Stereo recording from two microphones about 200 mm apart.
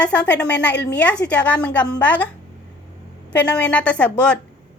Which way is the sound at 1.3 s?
5° left (ahead or behind).